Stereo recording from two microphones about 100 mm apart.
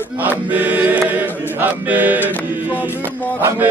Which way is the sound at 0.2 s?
15° right (ahead or behind).